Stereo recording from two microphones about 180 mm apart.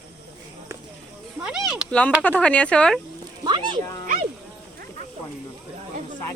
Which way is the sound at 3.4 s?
25° right (ahead or behind).